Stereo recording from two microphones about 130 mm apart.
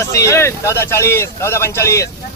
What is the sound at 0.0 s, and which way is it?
Speech, 25° left (ahead or behind).